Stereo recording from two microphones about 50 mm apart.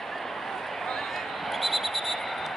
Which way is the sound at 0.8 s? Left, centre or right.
Centre.